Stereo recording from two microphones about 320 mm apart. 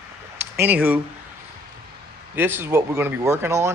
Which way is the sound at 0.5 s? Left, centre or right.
Centre.